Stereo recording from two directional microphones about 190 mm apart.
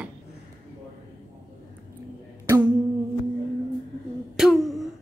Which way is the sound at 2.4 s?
10° right (ahead or behind).